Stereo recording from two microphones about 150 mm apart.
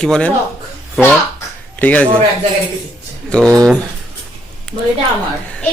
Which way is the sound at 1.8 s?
10° left (ahead or behind).